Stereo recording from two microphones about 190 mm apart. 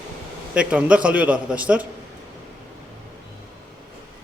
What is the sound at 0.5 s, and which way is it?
A man's voice, 5° right (ahead or behind).